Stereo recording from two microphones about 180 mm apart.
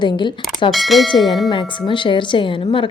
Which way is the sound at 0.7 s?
Centre (ahead or behind).